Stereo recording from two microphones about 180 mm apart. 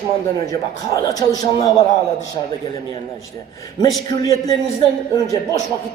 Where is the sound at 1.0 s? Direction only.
20° left (ahead or behind).